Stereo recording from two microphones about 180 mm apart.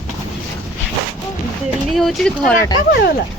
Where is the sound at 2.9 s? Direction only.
60° left (ahead or behind).